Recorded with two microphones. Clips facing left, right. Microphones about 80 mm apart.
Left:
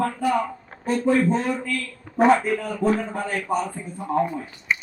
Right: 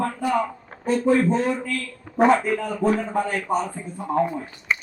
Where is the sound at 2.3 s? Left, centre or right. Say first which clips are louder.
Even; right.